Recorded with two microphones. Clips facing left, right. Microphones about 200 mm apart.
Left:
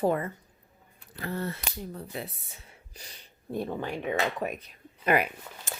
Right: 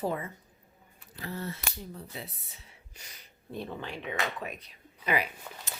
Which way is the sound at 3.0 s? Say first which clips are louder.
Left 4 dB; 30° left (ahead or behind).